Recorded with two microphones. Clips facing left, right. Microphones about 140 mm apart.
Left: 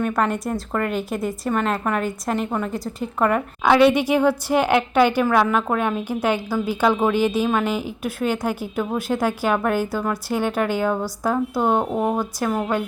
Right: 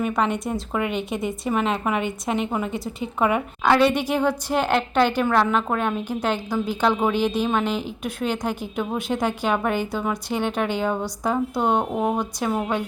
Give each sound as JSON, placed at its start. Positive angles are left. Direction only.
{"t": 0.0, "sound": "speech", "side_deg": 0}
{"t": 3.6, "sound": "a woman's voice", "side_deg": 10}